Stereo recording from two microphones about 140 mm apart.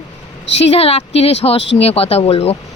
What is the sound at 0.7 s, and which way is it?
Speech, 45° left (ahead or behind).